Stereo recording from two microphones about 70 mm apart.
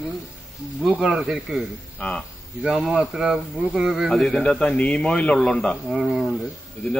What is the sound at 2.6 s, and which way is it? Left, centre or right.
Speech, centre.